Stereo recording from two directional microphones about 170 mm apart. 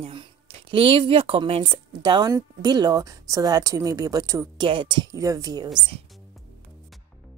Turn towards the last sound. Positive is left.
turn(degrees=-20)  # may be behind; listen again after turning